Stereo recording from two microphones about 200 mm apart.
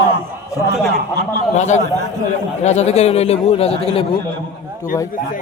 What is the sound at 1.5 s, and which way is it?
A man's voice, 35° left (ahead or behind).